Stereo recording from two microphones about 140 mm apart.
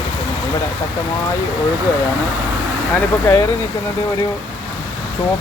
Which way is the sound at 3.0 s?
15° left (ahead or behind).